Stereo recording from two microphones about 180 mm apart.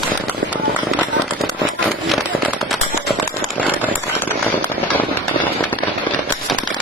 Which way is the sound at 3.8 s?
10° left (ahead or behind).